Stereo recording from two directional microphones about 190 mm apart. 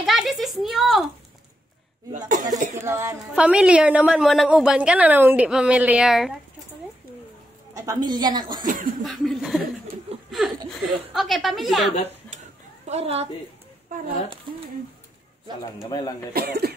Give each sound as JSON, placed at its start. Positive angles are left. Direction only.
{"t": 0.0, "sound": "a sound", "side_deg": 0}
{"t": 2.1, "sound": "speech", "side_deg": -40}
{"t": 2.8, "sound": "a woman's voice", "side_deg": -15}
{"t": 7.7, "sound": "a woman's voice", "side_deg": -20}
{"t": 8.6, "sound": "a sound", "side_deg": -45}
{"t": 9.0, "sound": "a woman's voice", "side_deg": 0}
{"t": 12.8, "sound": "speech", "side_deg": -35}
{"t": 15.9, "sound": "speech", "side_deg": 20}
{"t": 16.3, "sound": "speech", "side_deg": -55}